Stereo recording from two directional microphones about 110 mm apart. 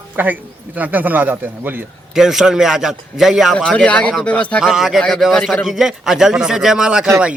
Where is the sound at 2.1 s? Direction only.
5° right (ahead or behind).